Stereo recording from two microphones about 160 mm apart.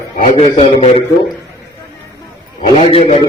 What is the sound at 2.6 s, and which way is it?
Speech, 40° left (ahead or behind).